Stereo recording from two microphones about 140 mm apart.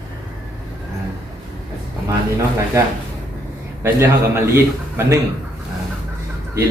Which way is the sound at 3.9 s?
20° right (ahead or behind).